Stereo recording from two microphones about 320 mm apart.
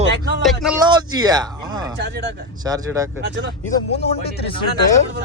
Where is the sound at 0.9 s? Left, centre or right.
Centre.